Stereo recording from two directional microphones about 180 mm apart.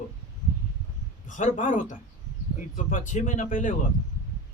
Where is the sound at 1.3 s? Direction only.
45° left (ahead or behind).